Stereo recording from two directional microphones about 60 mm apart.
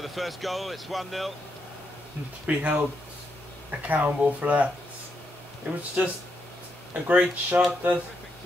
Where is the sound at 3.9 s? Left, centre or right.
Right.